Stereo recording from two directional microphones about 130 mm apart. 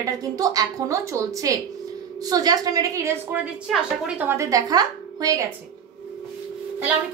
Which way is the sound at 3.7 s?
5° right (ahead or behind).